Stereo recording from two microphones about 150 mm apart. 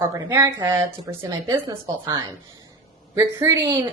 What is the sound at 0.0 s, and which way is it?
Speech, 20° right (ahead or behind).